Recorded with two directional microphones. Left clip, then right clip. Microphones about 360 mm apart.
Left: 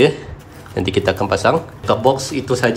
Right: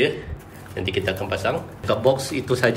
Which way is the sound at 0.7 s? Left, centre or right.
Centre.